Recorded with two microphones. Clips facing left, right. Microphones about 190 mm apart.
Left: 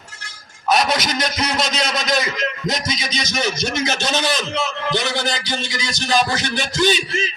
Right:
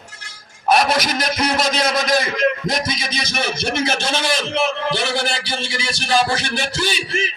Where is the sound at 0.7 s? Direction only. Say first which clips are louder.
Right 2 dB; 50° right (ahead or behind).